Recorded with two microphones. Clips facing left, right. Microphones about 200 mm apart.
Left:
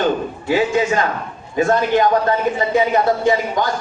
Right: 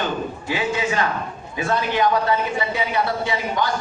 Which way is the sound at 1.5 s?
45° left (ahead or behind).